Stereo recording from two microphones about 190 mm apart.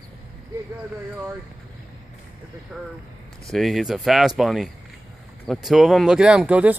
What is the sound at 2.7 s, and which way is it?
Speech, centre (ahead or behind).